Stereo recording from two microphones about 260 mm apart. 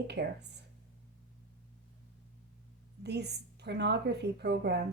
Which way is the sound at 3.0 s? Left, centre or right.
Right.